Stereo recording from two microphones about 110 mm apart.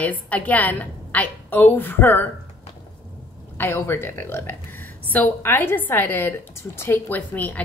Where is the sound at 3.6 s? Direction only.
25° left (ahead or behind).